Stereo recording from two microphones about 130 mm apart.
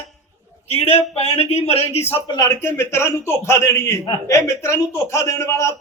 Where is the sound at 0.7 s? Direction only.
50° left (ahead or behind).